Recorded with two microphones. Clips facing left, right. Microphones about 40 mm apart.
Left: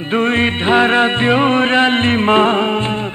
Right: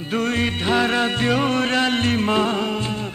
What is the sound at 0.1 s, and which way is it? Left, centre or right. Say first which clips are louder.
Music: left 7 dB; left.